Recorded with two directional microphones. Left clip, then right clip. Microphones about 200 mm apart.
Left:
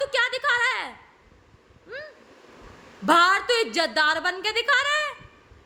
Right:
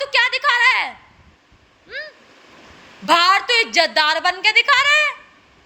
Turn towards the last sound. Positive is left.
turn(degrees=15)  # may be behind; listen again after turning